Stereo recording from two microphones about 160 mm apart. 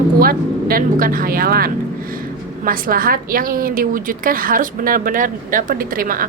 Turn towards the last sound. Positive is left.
turn(degrees=-60)  # may be behind; listen again after turning